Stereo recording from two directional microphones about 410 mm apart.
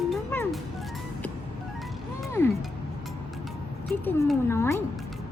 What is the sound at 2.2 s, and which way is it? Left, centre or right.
Music, centre.